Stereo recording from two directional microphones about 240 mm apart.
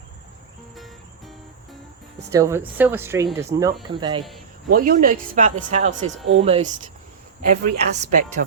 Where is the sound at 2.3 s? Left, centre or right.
Centre.